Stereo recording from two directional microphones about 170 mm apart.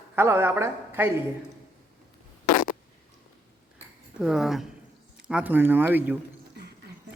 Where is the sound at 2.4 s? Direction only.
55° left (ahead or behind).